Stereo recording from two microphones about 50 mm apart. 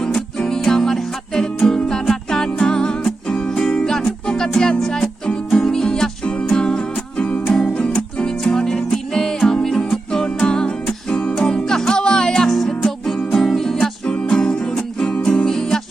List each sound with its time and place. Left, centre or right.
0.3 s music: centre
14.1 s music: centre